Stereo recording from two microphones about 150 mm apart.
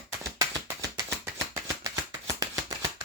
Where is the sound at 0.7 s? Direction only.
25° right (ahead or behind).